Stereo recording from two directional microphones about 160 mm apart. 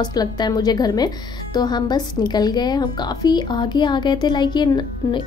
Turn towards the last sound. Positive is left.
turn(degrees=30)  # may be behind; listen again after turning